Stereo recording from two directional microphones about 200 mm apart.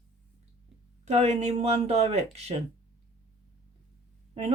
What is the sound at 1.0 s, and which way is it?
Speech, 35° right (ahead or behind).